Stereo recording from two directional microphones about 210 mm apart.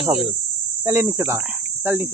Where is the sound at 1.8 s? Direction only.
10° right (ahead or behind).